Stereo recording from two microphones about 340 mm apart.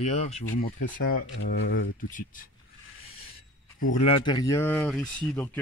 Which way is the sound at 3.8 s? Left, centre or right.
Centre.